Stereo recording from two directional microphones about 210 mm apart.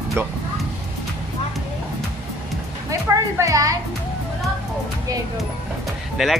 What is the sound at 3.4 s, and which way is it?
Music, 15° right (ahead or behind).